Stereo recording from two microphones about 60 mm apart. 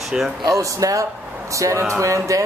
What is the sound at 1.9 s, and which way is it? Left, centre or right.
Music, right.